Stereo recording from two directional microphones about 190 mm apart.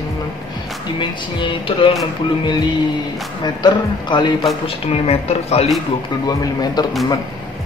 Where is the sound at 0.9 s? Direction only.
25° left (ahead or behind).